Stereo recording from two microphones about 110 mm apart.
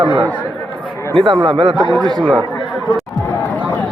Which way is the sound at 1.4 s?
50° right (ahead or behind).